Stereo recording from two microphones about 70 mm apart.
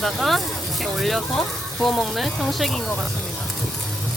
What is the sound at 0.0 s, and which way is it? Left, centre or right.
Speech, centre.